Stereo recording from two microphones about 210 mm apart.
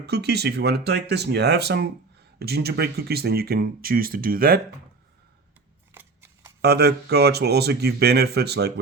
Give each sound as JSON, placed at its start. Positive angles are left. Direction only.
{"t": 0.0, "sound": "speech", "side_deg": -50}
{"t": 5.9, "sound": "scissors", "side_deg": -10}
{"t": 6.6, "sound": "speech", "side_deg": -50}